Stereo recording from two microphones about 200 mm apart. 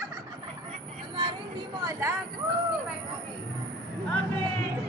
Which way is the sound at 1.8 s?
15° right (ahead or behind).